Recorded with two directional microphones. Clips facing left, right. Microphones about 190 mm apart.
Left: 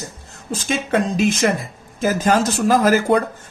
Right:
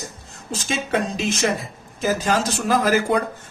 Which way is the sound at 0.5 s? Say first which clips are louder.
Left 3 dB; 50° left (ahead or behind).